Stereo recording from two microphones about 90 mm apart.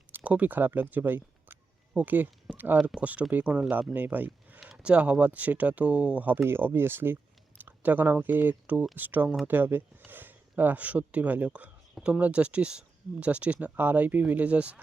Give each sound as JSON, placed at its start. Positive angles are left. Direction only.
{"t": 0.2, "sound": "speech", "side_deg": -15}
{"t": 4.6, "sound": "speech", "side_deg": -5}
{"t": 11.9, "sound": "speech", "side_deg": -5}